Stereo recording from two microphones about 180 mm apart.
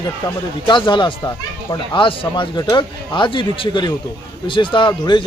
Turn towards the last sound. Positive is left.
turn(degrees=25)  # may be behind; listen again after turning